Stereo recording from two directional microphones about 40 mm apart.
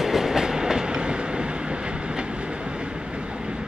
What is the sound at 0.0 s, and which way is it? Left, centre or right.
Train, centre.